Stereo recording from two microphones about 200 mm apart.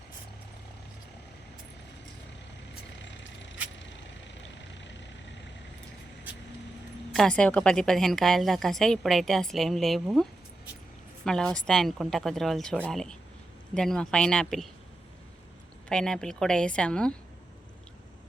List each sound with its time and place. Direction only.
3.0 s vehicle: 65° left (ahead or behind)
7.1 s a woman's voice: 5° left (ahead or behind)
11.3 s a woman's voice: 5° left (ahead or behind)
15.9 s a woman's voice: 5° left (ahead or behind)